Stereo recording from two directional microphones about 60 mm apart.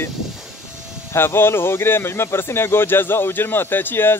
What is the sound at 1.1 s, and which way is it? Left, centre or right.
Speech, left.